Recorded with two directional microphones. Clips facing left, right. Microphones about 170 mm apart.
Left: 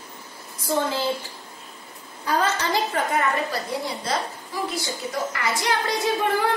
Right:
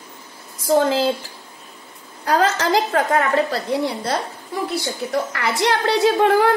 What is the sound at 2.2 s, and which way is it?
A woman's voice, 90° right.